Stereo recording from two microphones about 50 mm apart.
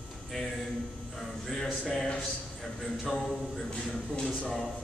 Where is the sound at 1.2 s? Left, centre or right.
Centre.